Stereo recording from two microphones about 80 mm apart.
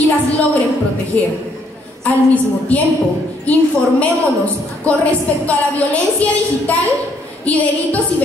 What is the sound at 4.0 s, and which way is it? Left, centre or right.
A woman's voice, centre.